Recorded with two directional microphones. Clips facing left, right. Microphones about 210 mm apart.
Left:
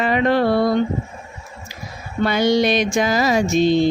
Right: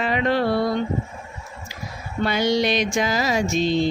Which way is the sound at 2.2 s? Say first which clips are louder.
Left 4 dB; 50° left (ahead or behind).